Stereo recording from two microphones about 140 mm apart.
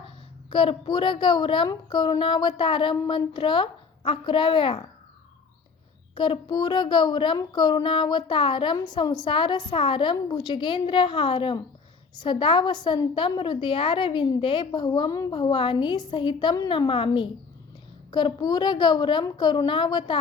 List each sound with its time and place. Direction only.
0.5 s a woman's voice: 35° left (ahead or behind)
6.1 s a woman's voice: 35° left (ahead or behind)